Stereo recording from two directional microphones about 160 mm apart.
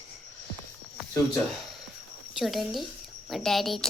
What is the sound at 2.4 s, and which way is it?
Speech, centre (ahead or behind).